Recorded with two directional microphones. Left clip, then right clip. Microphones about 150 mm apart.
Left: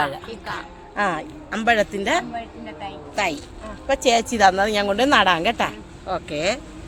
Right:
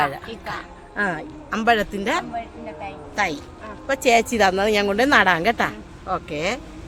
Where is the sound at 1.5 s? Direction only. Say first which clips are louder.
Even; 15° right (ahead or behind).